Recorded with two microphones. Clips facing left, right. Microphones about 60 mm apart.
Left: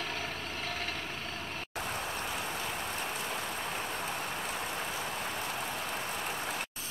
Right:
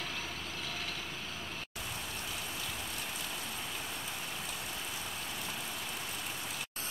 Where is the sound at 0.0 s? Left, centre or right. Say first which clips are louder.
Left 4 dB; left.